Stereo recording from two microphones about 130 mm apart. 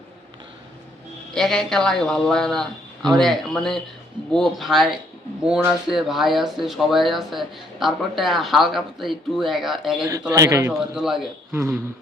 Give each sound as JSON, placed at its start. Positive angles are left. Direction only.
{"t": 1.3, "sound": "speech", "side_deg": 5}
{"t": 10.3, "sound": "a man's voice", "side_deg": -25}
{"t": 10.7, "sound": "speech", "side_deg": -5}